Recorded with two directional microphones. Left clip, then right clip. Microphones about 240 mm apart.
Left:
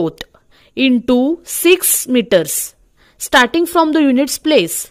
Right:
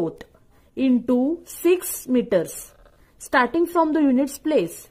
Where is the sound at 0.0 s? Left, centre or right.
Left.